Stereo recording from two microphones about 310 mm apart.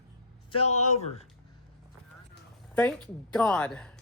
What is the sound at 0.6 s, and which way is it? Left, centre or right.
Speech, left.